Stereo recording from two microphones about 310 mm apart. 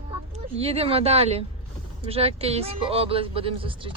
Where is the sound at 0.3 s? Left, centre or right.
Centre.